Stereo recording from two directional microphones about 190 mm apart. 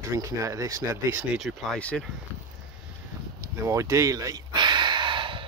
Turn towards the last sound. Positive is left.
turn(degrees=-25)  # may be behind; listen again after turning